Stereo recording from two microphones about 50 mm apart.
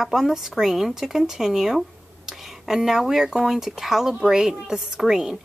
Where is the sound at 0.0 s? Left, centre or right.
Centre.